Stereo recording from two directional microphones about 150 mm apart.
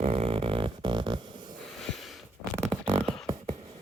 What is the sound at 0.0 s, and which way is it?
Music, 40° right (ahead or behind).